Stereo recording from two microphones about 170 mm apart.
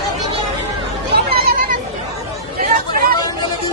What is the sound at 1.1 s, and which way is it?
Chatter, 65° right (ahead or behind).